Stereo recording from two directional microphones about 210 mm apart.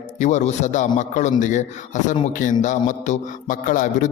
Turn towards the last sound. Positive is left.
turn(degrees=40)  # may be behind; listen again after turning